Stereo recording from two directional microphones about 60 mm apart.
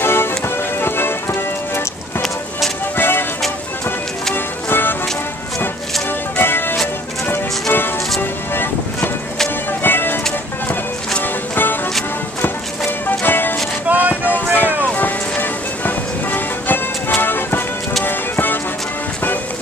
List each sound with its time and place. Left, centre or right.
0.0 s music: left
3.0 s music: left
4.6 s music: left
6.3 s music: left
8.2 s music: left
13.0 s music: left
13.8 s a sound: right
14.3 s vehicle: left
14.8 s music: left